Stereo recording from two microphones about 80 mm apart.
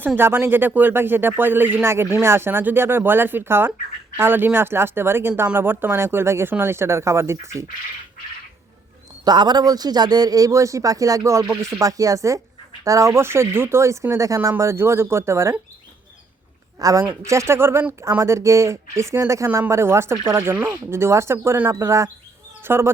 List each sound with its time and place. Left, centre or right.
0.2 s speech: right
9.2 s a man's voice: right
16.8 s a man's voice: right
21.7 s speech: right